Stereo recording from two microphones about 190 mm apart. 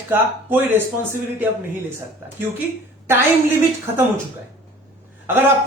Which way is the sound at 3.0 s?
10° right (ahead or behind).